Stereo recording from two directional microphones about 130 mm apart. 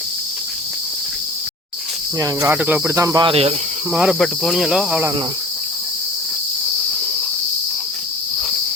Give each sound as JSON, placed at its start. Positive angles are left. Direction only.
{"t": 2.1, "sound": "cricket", "side_deg": -25}
{"t": 2.6, "sound": "cricket", "side_deg": -15}
{"t": 3.2, "sound": "speech", "side_deg": -50}
{"t": 3.9, "sound": "cricket", "side_deg": -5}